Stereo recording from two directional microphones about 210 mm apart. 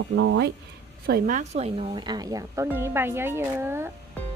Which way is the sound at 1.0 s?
45° right (ahead or behind).